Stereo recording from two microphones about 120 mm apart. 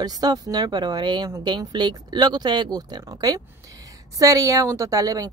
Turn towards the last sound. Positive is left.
turn(degrees=-30)  # may be behind; listen again after turning